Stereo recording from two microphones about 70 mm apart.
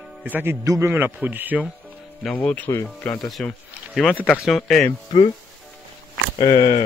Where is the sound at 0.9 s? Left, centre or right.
Right.